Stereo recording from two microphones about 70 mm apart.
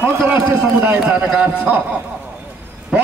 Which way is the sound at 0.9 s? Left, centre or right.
Centre.